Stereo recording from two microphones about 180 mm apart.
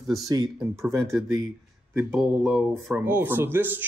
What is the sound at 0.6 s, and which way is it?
Speech, 15° right (ahead or behind).